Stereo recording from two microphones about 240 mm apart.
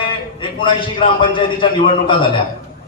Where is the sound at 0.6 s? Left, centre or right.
Left.